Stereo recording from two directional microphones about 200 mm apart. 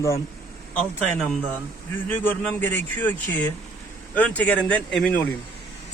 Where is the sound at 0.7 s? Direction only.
5° left (ahead or behind).